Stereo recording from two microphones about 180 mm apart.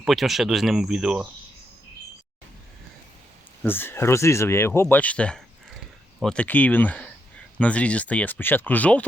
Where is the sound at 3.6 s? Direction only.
10° left (ahead or behind).